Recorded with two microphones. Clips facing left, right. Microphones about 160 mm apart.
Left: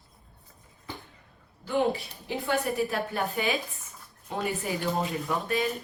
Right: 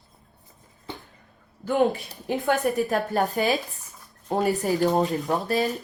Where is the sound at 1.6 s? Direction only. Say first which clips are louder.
Right 4 dB; 45° right (ahead or behind).